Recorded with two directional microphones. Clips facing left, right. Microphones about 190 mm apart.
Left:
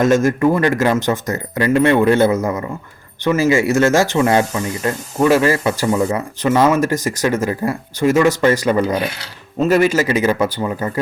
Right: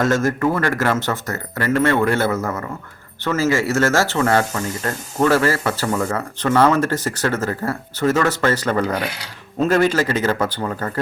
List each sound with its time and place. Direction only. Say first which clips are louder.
0.0 s speech: left 4 dB; 15° left (ahead or behind)